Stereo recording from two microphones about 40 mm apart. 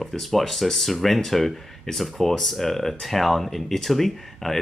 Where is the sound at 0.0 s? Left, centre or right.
Centre.